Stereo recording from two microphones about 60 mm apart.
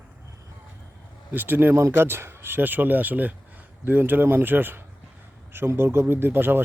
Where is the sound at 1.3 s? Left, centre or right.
Right.